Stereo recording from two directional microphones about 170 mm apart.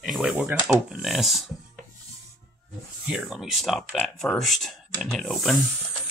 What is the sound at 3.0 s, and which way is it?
Speech, 5° right (ahead or behind).